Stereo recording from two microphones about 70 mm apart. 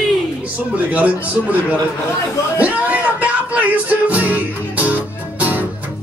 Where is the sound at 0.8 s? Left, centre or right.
Right.